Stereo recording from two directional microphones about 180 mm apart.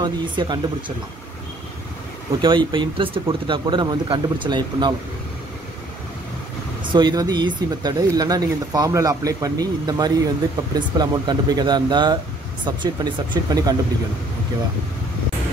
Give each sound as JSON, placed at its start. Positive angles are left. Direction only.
{"t": 0.0, "sound": "speech", "side_deg": -25}
{"t": 2.4, "sound": "speech", "side_deg": -25}
{"t": 6.8, "sound": "speech", "side_deg": -25}